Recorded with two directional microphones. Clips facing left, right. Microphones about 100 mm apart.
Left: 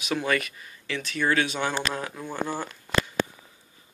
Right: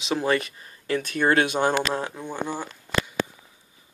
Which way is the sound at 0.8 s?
45° right (ahead or behind).